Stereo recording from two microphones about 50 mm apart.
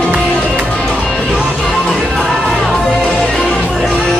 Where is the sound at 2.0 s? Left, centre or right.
Centre.